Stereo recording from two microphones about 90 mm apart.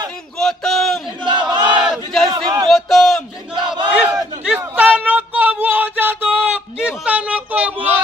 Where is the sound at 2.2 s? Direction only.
50° right (ahead or behind).